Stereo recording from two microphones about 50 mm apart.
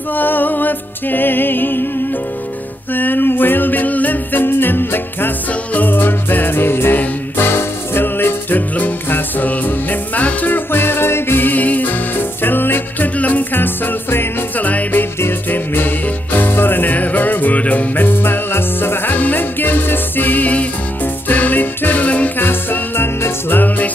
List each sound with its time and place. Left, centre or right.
0.1 s music: left
2.9 s music: left
22.4 s music: left